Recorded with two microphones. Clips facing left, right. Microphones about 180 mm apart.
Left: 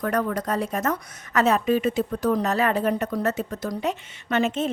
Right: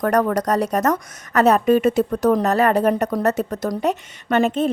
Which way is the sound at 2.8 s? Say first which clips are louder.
Right 5 dB; 45° right (ahead or behind).